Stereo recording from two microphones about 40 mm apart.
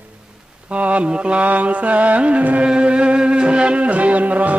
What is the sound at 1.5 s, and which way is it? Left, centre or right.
Mantra, right.